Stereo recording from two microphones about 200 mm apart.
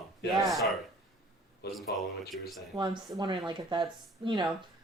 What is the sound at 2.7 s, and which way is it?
Speech, 25° right (ahead or behind).